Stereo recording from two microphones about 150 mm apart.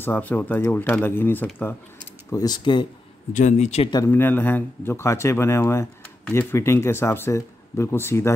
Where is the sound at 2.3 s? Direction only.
30° left (ahead or behind).